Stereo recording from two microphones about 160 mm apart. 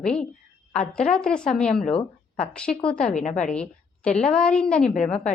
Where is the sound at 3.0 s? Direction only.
50° left (ahead or behind).